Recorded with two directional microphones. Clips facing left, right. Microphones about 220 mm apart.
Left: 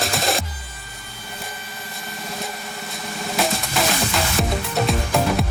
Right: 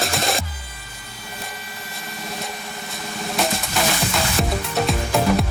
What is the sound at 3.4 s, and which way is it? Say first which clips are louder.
Music: even; centre (ahead or behind).